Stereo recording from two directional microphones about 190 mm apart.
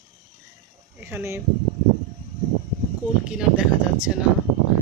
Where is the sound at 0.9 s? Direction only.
10° right (ahead or behind).